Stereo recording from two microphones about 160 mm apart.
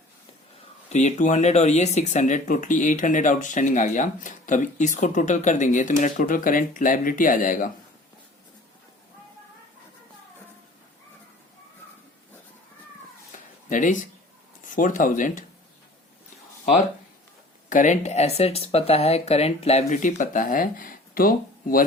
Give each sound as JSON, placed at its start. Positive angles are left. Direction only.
{"t": 0.9, "sound": "speech", "side_deg": 45}
{"t": 13.3, "sound": "cat", "side_deg": 55}
{"t": 14.6, "sound": "speech", "side_deg": 55}
{"t": 17.7, "sound": "speech", "side_deg": 50}